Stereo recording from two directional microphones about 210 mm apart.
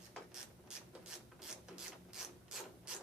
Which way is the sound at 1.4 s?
5° right (ahead or behind).